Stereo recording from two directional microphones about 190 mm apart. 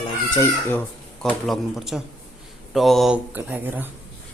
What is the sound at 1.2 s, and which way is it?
Speech, centre (ahead or behind).